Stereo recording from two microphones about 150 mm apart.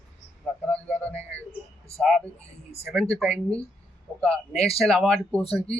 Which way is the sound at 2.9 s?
5° left (ahead or behind).